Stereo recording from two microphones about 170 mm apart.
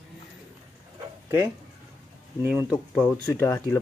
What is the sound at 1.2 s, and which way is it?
Speech, 15° right (ahead or behind).